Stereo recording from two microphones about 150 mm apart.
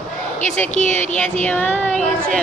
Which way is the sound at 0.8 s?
55° left (ahead or behind).